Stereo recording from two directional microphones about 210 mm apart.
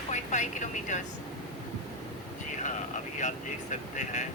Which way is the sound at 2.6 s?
35° left (ahead or behind).